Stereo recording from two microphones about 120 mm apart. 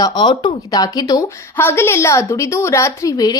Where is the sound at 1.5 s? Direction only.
20° left (ahead or behind).